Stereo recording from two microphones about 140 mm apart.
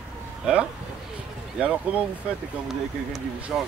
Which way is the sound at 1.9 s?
10° right (ahead or behind).